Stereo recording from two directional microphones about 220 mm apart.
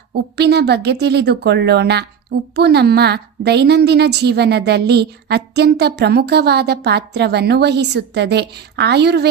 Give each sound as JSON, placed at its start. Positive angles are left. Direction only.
{"t": 0.1, "sound": "a woman's voice", "side_deg": -50}